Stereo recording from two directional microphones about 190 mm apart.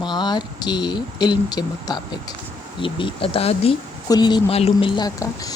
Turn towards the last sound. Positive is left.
turn(degrees=20)  # may be behind; listen again after turning